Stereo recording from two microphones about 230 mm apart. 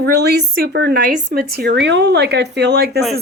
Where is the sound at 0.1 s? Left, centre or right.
Right.